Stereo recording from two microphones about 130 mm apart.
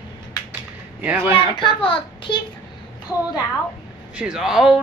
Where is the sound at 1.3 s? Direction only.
40° left (ahead or behind).